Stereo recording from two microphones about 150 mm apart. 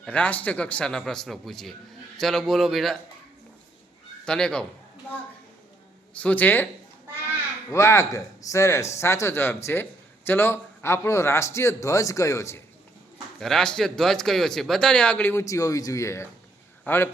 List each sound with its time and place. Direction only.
0.0 s a man's voice: 10° left (ahead or behind)
4.3 s a man's voice: 5° left (ahead or behind)
6.1 s a man's voice: 10° left (ahead or behind)
7.7 s a man's voice: 20° left (ahead or behind)
13.4 s a man's voice: 5° left (ahead or behind)